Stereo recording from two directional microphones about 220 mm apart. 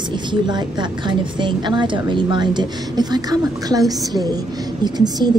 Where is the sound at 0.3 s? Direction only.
20° right (ahead or behind).